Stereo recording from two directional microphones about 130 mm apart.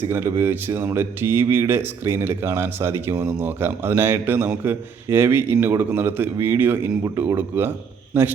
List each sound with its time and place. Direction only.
0.1 s speech: 20° right (ahead or behind)